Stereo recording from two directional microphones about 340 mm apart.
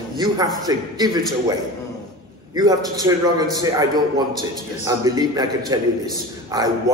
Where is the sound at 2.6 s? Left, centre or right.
Centre.